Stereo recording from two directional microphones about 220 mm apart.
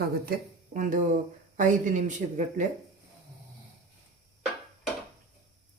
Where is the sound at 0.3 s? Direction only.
40° right (ahead or behind).